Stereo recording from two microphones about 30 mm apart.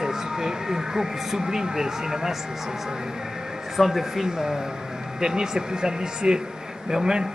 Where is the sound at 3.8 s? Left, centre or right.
Centre.